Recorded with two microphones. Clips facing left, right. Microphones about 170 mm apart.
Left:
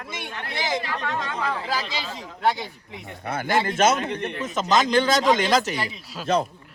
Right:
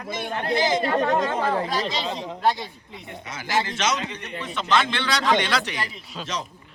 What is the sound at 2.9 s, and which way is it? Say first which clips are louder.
A man's voice: left 6 dB; 55° left (ahead or behind).